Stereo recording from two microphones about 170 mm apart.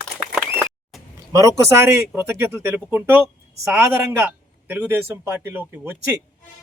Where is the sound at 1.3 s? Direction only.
20° right (ahead or behind).